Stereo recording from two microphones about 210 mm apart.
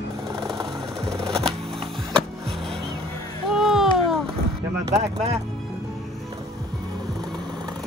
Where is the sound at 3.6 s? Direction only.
Centre (ahead or behind).